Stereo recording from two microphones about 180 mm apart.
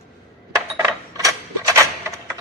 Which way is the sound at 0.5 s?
20° right (ahead or behind).